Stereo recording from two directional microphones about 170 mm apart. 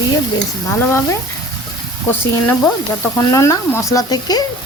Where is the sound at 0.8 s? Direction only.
15° left (ahead or behind).